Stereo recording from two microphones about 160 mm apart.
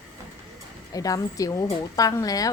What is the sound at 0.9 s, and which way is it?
Speech, 20° left (ahead or behind).